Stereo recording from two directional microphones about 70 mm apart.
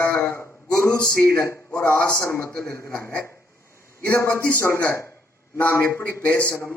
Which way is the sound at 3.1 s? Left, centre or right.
Left.